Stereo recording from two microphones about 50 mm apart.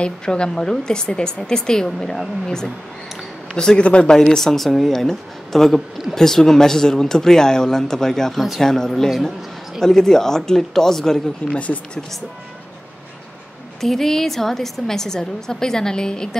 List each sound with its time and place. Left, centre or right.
0.0 s speech: centre
11.4 s speech: left
13.7 s speech: centre